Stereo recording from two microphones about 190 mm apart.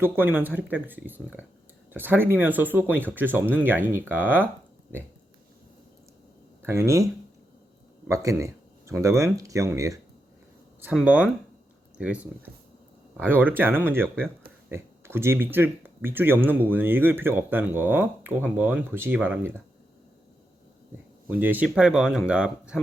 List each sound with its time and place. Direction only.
0.0 s speech: 10° right (ahead or behind)
6.6 s speech: 15° right (ahead or behind)
21.2 s speech: 10° right (ahead or behind)